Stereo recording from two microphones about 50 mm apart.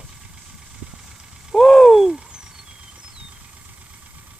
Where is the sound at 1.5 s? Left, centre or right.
Centre.